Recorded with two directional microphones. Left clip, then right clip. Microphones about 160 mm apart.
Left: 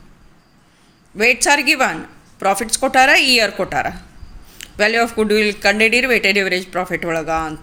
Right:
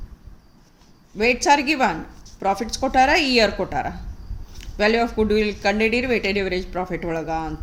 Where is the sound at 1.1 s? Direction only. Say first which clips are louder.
Left 3 dB; 10° left (ahead or behind).